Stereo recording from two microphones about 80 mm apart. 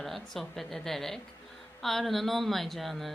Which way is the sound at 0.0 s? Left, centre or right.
Centre.